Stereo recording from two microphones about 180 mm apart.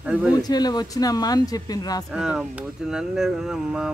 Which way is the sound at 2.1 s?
5° right (ahead or behind).